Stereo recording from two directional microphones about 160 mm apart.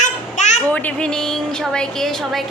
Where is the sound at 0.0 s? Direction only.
50° left (ahead or behind).